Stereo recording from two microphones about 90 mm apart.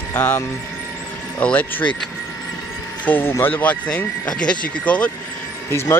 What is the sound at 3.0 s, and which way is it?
Speech, 20° left (ahead or behind).